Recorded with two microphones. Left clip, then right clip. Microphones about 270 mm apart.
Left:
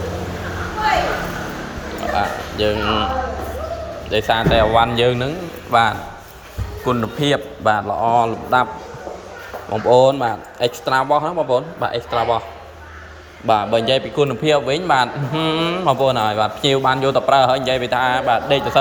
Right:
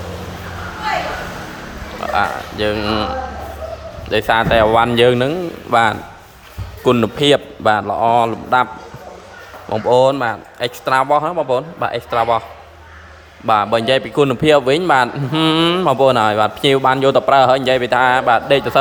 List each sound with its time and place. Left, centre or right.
2.1 s a man's voice: centre
4.1 s a man's voice: centre
9.6 s a man's voice: centre
11.3 s a man's voice: right
11.5 s a man's voice: centre
13.5 s a man's voice: centre